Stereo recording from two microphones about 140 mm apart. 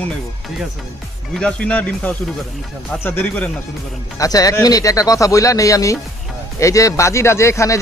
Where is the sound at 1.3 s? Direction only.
5° left (ahead or behind).